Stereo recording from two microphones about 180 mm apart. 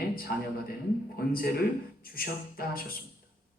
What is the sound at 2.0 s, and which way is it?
Speech, 55° left (ahead or behind).